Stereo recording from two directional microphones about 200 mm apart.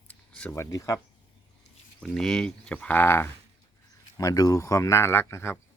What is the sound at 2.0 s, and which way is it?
Speech, 5° left (ahead or behind).